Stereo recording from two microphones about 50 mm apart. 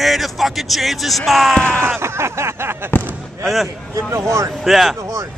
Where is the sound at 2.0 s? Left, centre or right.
Right.